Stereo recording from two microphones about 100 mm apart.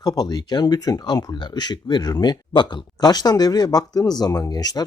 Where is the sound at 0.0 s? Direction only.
40° left (ahead or behind).